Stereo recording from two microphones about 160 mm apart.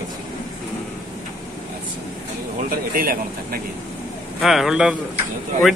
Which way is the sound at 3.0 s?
65° right (ahead or behind).